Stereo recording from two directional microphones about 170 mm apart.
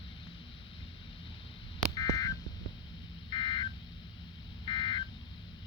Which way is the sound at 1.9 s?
20° left (ahead or behind).